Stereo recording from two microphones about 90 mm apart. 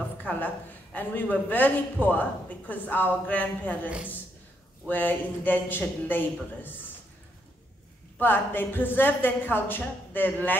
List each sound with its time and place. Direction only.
0.2 s a sound: 20° left (ahead or behind)
0.9 s a man's voice: 20° left (ahead or behind)
8.2 s a man's voice: 20° left (ahead or behind)